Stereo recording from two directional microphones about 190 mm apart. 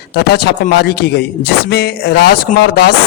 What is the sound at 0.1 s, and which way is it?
Speech, 60° left (ahead or behind).